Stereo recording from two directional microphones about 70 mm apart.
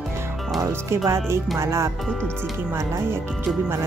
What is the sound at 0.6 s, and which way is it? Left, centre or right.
Speech, right.